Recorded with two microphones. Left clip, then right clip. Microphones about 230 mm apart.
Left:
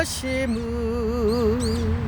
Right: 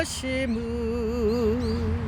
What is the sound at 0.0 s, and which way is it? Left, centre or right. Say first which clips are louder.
Music: left 3 dB; centre.